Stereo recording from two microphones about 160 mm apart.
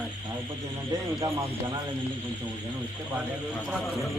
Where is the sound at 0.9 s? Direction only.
20° right (ahead or behind).